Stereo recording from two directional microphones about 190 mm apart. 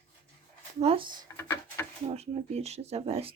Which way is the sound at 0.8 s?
30° right (ahead or behind).